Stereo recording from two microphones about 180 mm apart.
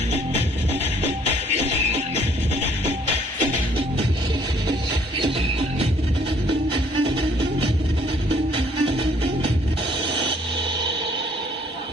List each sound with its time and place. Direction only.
5.2 s music: 30° right (ahead or behind)
8.5 s music: 30° right (ahead or behind)